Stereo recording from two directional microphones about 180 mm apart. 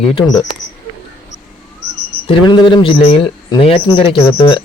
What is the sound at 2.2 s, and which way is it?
Speech, 30° left (ahead or behind).